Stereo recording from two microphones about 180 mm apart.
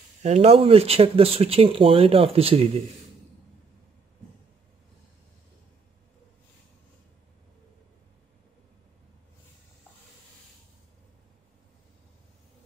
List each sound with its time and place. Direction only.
0.2 s speech: 40° right (ahead or behind)